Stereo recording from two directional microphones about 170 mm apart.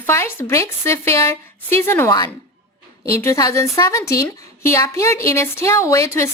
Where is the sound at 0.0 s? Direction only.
15° left (ahead or behind).